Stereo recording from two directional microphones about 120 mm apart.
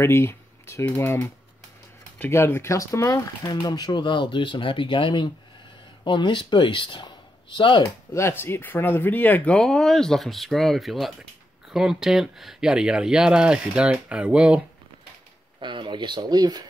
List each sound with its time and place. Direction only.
0.0 s speech: 20° left (ahead or behind); by 7.9 s 45° left (ahead or behind)
8.1 s speech: 20° left (ahead or behind); by 14.6 s 10° right (ahead or behind)
15.6 s speech: 40° right (ahead or behind)